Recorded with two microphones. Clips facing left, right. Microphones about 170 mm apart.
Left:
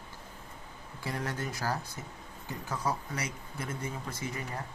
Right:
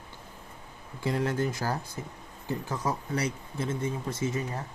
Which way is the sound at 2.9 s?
30° right (ahead or behind).